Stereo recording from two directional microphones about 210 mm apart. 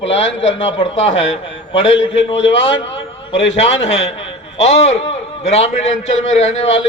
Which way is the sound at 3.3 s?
65° left (ahead or behind).